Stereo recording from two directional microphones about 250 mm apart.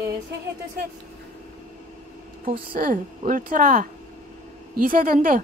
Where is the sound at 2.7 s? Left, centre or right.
Right.